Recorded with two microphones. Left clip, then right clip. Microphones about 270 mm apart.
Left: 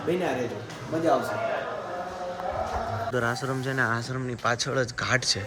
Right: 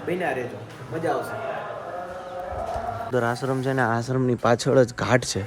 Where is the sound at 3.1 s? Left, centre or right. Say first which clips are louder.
Right 6 dB; centre.